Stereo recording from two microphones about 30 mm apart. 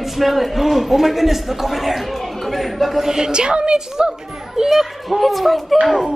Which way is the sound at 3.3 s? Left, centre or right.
Right.